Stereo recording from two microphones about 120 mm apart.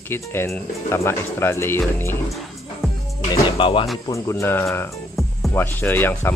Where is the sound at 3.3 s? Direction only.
45° left (ahead or behind).